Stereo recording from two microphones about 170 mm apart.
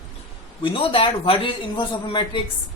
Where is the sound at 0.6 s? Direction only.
30° left (ahead or behind).